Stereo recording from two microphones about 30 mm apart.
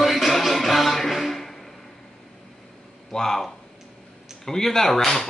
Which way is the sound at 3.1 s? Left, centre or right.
Centre.